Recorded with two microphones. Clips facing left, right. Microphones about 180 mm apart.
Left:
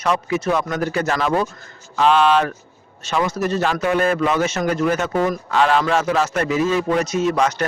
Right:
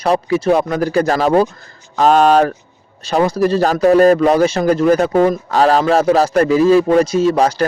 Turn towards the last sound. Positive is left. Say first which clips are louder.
# right 5 dB
turn(degrees=-30)  # may be behind; listen again after turning